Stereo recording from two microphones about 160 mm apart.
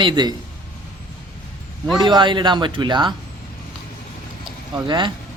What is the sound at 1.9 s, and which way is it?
Speech, 30° right (ahead or behind).